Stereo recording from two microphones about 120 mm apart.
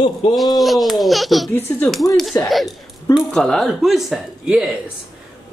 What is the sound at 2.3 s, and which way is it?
Speech, 25° left (ahead or behind).